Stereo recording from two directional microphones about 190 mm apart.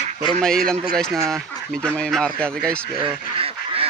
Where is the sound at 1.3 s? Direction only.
Centre (ahead or behind).